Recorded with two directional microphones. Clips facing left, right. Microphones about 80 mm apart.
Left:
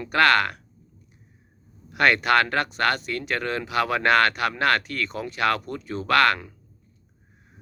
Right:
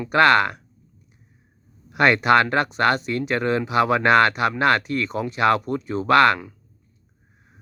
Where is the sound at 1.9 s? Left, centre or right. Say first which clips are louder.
Right 3 dB; right.